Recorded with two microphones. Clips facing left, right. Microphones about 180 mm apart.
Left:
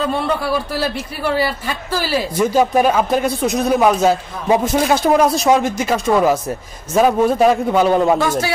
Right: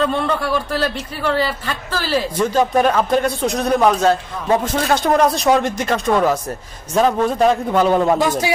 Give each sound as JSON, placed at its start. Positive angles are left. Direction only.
{"t": 0.0, "sound": "a man's voice", "side_deg": 10}
{"t": 8.2, "sound": "speech", "side_deg": -15}